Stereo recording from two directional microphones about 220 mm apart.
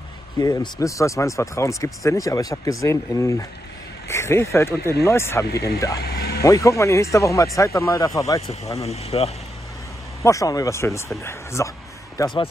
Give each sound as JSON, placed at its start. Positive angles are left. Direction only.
{"t": 0.4, "sound": "speech", "side_deg": 15}
{"t": 6.0, "sound": "vehicle", "side_deg": 45}
{"t": 6.4, "sound": "speech", "side_deg": 15}
{"t": 8.7, "sound": "speech", "side_deg": 30}
{"t": 10.2, "sound": "speech", "side_deg": 15}